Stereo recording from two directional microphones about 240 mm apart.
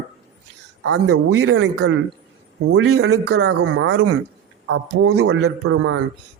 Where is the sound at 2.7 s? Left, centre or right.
Right.